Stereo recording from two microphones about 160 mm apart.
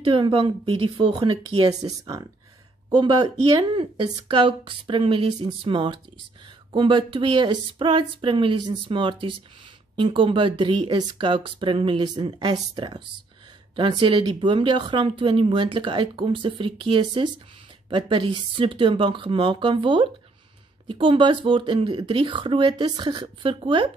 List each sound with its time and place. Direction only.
0.0 s speech: 30° right (ahead or behind)
1.7 s speech: 25° right (ahead or behind)